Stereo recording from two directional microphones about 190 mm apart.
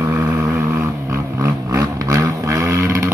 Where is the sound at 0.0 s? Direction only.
15° right (ahead or behind).